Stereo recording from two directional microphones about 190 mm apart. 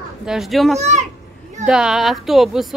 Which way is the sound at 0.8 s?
35° right (ahead or behind).